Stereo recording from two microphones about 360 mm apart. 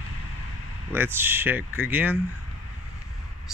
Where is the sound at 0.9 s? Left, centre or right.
Centre.